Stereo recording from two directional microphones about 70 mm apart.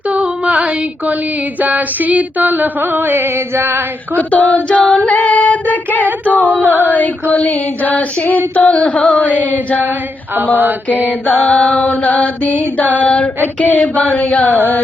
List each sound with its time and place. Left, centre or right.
0.1 s a sound: centre
1.6 s music: right
4.2 s mantra: left
4.8 s female singing: centre
5.0 s female singing: left
6.2 s mantra: left
11.3 s mantra: centre